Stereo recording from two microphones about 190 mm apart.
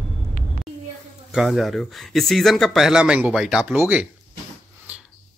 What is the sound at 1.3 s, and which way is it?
Speech, centre (ahead or behind).